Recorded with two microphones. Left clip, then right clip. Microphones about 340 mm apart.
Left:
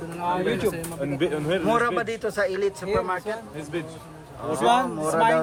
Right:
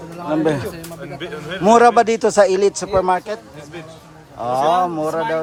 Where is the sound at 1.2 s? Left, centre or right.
Centre.